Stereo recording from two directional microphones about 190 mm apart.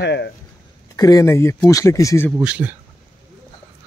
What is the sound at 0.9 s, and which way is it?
Speech, 20° left (ahead or behind).